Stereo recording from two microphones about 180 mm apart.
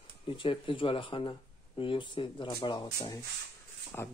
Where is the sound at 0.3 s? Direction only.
30° left (ahead or behind).